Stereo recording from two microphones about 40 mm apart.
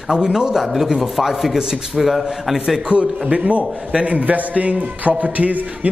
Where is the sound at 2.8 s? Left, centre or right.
Right.